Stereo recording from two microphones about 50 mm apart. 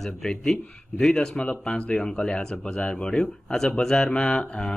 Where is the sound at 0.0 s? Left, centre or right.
Centre.